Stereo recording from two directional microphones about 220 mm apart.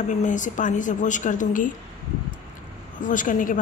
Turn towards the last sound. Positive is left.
turn(degrees=35)  # may be behind; listen again after turning